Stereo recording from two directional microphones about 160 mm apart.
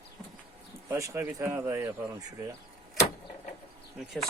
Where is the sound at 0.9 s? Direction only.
15° right (ahead or behind).